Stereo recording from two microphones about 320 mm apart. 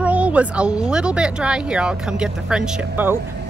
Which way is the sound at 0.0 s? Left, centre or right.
Centre.